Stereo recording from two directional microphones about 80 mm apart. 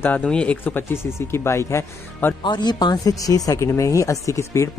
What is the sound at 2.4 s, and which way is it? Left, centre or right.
Speech, left.